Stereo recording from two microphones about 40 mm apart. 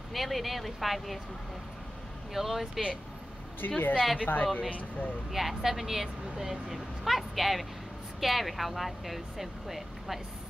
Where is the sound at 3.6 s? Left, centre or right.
Left.